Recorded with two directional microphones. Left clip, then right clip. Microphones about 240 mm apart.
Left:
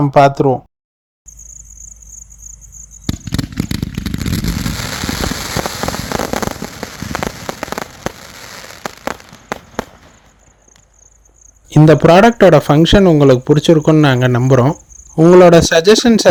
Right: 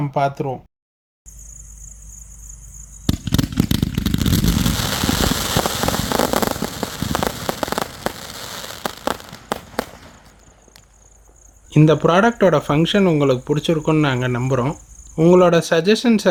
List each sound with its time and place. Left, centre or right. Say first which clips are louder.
0.0 s speech: left 11 dB; left
3.1 s a sound: right 1 dB; centre
6.7 s rain on surface: even; centre
7.3 s rain on surface: right 1 dB; centre
8.5 s a sound: left 1 dB; centre
11.7 s speech: left 7 dB; left